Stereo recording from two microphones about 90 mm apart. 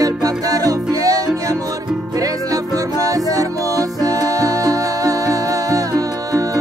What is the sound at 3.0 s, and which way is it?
Music, 40° right (ahead or behind).